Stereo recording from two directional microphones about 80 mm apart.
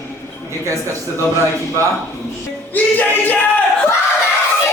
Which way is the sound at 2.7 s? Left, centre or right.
Left.